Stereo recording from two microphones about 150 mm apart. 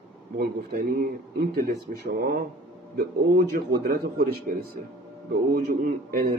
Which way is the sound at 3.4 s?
90° right.